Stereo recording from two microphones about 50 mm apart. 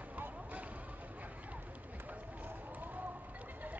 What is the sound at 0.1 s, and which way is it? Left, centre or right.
Basketball bounce, right.